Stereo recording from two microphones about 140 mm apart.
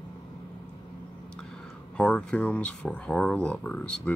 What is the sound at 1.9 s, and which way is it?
Speech, 10° left (ahead or behind).